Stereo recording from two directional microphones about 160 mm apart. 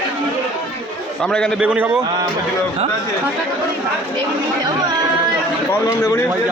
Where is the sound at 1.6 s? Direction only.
10° right (ahead or behind).